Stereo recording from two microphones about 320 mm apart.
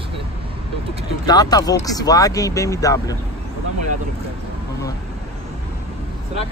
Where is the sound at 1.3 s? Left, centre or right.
Centre.